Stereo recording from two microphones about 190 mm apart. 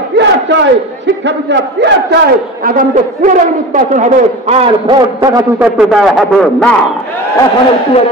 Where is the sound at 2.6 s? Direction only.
45° right (ahead or behind); by 5.4 s 20° right (ahead or behind).